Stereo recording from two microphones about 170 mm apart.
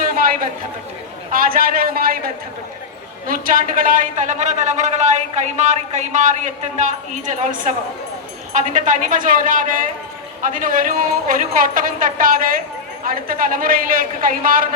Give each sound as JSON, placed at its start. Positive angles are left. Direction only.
{"t": 1.3, "sound": "a man's voice", "side_deg": -55}